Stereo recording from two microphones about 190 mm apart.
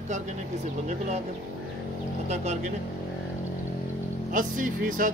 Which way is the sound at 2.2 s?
35° right (ahead or behind).